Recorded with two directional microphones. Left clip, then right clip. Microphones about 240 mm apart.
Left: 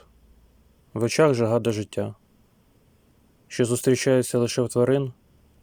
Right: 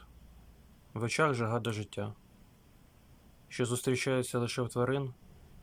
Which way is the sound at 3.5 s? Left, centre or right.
Left.